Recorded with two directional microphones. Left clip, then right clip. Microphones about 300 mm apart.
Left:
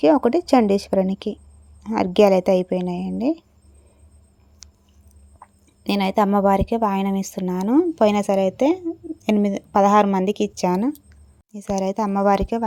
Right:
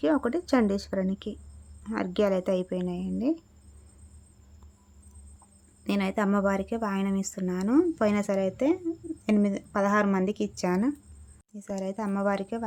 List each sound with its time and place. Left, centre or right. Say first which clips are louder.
0.0 s a woman's voice: left 10 dB; centre
5.8 s a woman's voice: left 9 dB; centre